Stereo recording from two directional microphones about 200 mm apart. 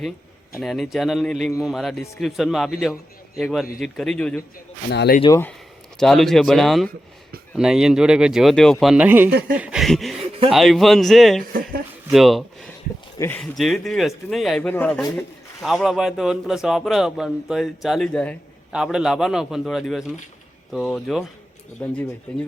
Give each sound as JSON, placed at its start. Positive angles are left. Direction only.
{"t": 0.6, "sound": "speech", "side_deg": 0}
{"t": 4.9, "sound": "speech", "side_deg": 55}
{"t": 5.3, "sound": "speech", "side_deg": 10}
{"t": 9.6, "sound": "a sound", "side_deg": -5}
{"t": 10.5, "sound": "speech", "side_deg": 0}
{"t": 13.1, "sound": "speech", "side_deg": 15}
{"t": 13.4, "sound": "speech", "side_deg": 5}